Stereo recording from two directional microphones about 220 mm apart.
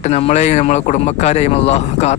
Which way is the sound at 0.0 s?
30° left (ahead or behind).